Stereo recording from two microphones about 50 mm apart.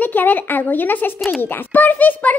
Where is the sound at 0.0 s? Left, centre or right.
Left.